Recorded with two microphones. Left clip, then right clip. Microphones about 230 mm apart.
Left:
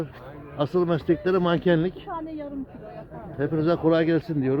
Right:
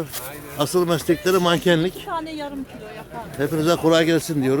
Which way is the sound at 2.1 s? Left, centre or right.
Right.